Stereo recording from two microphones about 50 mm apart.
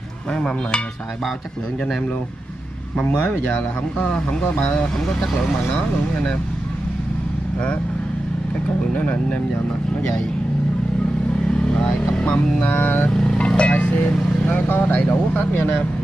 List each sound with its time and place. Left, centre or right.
0.3 s a sound: centre
3.3 s speech: left
4.7 s a sound: centre
8.9 s speech: left
11.7 s speech: centre
12.6 s vehicle: left
13.1 s vehicle: centre
13.5 s vehicle: left
13.7 s speech: left
15.3 s vehicle: left